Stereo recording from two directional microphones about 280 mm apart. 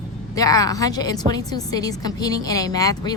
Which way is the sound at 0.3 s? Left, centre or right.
Centre.